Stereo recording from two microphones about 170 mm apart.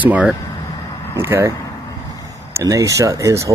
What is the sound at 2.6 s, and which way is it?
Speech, 20° right (ahead or behind).